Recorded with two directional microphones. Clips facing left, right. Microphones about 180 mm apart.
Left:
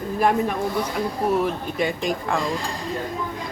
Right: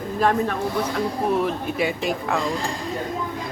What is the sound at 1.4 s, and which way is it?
Speech, 5° right (ahead or behind).